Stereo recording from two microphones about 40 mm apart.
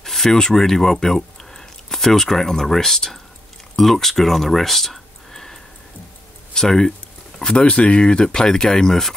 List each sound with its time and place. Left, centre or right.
0.0 s speech: centre
7.3 s speech: left